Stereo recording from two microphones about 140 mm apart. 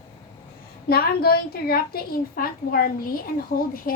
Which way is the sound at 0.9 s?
90° left.